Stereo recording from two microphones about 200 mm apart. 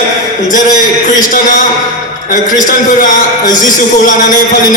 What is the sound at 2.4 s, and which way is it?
A man's voice, 40° left (ahead or behind).